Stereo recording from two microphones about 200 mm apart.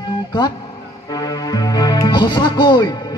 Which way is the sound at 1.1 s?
20° left (ahead or behind).